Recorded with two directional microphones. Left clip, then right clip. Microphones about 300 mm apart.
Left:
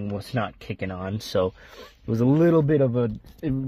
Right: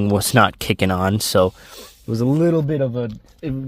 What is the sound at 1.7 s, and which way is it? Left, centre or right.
A man's voice, centre.